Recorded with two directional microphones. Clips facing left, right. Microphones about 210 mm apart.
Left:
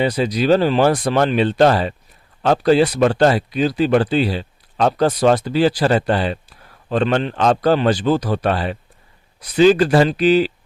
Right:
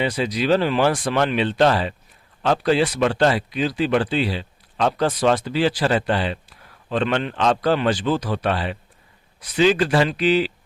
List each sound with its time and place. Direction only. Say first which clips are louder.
0.0 s speech: left 4 dB; 40° left (ahead or behind)